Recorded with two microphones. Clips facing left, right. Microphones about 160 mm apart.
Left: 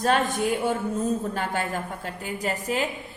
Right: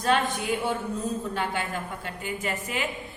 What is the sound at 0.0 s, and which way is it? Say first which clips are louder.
A woman's voice: left 2 dB; 45° left (ahead or behind).